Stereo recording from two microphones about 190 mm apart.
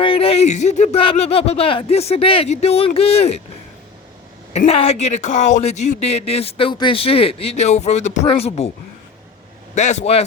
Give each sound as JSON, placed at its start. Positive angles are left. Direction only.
{"t": 0.0, "sound": "speech", "side_deg": 30}
{"t": 4.5, "sound": "speech", "side_deg": 35}
{"t": 9.7, "sound": "speech", "side_deg": 40}